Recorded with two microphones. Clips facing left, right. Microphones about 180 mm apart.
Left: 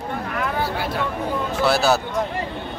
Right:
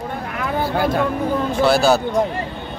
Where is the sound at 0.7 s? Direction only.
50° right (ahead or behind).